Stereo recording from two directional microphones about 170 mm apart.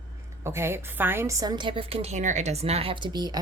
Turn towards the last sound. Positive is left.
turn(degrees=-25)  # may be behind; listen again after turning